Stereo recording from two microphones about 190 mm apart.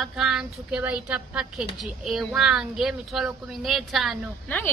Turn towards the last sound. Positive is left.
turn(degrees=0)  # may be behind; listen again after turning